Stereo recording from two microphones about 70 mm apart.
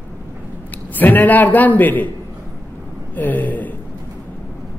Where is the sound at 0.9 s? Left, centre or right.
Left.